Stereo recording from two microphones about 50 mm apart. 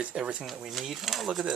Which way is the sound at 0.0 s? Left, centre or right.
Right.